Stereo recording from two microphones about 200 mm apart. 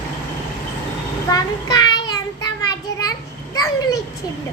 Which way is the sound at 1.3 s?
20° left (ahead or behind).